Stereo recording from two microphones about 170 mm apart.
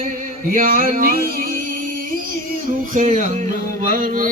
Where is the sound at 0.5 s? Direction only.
55° right (ahead or behind).